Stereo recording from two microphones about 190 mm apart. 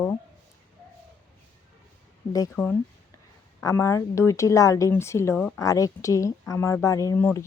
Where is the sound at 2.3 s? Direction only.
20° left (ahead or behind).